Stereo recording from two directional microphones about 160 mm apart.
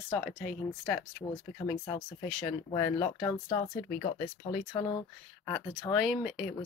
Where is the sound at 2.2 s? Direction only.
5° left (ahead or behind).